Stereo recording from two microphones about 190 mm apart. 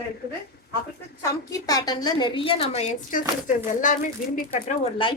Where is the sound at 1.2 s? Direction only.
20° left (ahead or behind); by 4.8 s 45° left (ahead or behind).